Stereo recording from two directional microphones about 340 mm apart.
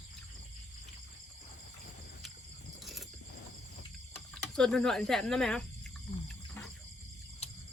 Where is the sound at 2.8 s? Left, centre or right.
Centre.